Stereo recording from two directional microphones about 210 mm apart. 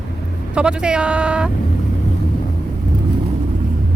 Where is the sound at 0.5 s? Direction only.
5° right (ahead or behind).